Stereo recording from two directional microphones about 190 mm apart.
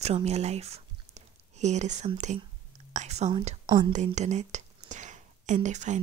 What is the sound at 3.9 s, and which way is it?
Speech, 35° right (ahead or behind).